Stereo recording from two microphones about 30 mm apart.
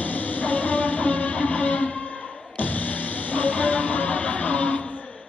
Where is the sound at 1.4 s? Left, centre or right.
Left.